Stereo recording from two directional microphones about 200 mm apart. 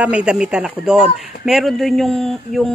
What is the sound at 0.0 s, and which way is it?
A man's voice, 5° right (ahead or behind).